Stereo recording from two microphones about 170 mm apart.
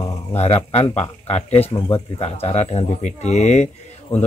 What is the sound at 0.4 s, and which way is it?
Speech, 40° left (ahead or behind).